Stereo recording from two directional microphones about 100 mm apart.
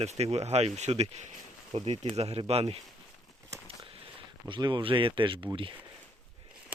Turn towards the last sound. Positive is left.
turn(degrees=-60)  # may be behind; listen again after turning